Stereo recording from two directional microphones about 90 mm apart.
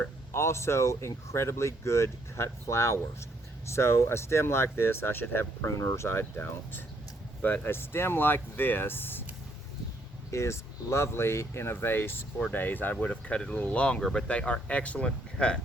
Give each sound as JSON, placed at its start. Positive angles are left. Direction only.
{"t": 0.3, "sound": "speech", "side_deg": 30}
{"t": 10.3, "sound": "speech", "side_deg": 30}